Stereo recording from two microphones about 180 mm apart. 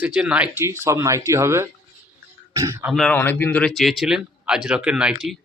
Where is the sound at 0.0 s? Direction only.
5° right (ahead or behind).